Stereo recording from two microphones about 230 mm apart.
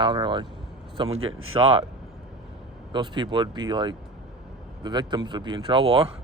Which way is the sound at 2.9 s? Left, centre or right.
Centre.